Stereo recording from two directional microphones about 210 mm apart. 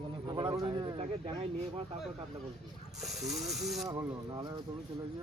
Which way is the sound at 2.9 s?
Centre (ahead or behind).